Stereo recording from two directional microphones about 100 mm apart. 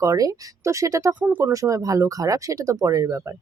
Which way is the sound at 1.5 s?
35° right (ahead or behind).